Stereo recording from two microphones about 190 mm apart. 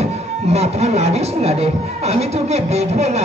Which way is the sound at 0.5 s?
35° right (ahead or behind).